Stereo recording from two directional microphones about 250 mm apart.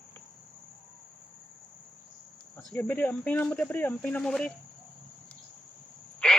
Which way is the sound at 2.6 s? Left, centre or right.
Centre.